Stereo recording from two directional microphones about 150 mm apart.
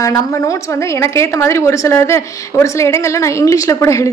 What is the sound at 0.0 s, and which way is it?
A woman's voice, 20° left (ahead or behind).